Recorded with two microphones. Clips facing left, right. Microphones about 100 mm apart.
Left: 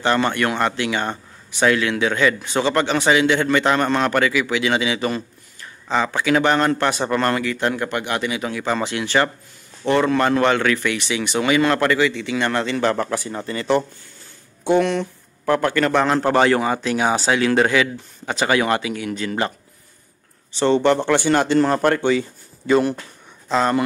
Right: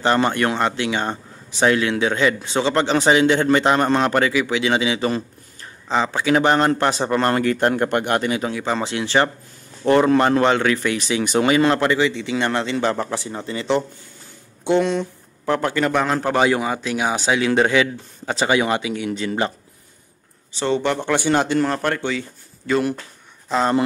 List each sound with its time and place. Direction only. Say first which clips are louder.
0.0 s a man's voice: right 1 dB; 30° right (ahead or behind)
7.3 s a man's voice: right 4 dB; 45° right (ahead or behind)
8.4 s a man's voice: even; 25° right (ahead or behind)
11.0 s speech: right 3 dB; 35° right (ahead or behind)
11.7 s a man's voice: even; 20° right (ahead or behind)
20.5 s speech: left 4 dB; 5° right (ahead or behind)
21.2 s a man's voice: left 1 dB; 15° right (ahead or behind)
21.7 s speech: left 5 dB; 5° left (ahead or behind)